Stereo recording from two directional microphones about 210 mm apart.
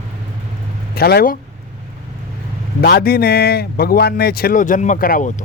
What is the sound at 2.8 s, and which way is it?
A man's voice, 50° left (ahead or behind).